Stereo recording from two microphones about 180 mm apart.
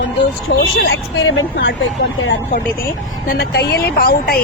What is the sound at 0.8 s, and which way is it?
Speech, 80° left.